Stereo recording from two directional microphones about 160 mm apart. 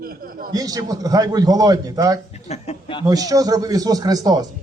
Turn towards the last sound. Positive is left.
turn(degrees=-25)  # may be behind; listen again after turning